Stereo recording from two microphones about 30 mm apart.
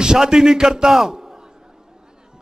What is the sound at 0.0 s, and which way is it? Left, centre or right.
Speech, right.